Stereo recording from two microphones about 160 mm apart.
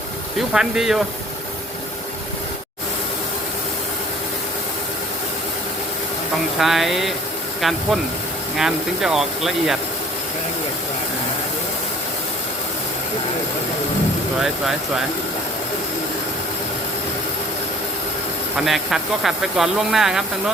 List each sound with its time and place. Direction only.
0.3 s speech: 5° right (ahead or behind)
6.6 s speech: centre (ahead or behind)
14.4 s speech: centre (ahead or behind)
18.5 s speech: centre (ahead or behind)